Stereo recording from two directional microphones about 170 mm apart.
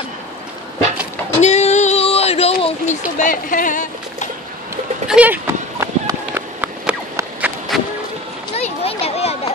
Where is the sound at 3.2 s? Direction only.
55° left (ahead or behind).